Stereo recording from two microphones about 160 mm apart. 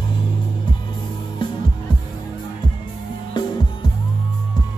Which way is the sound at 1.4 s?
30° left (ahead or behind).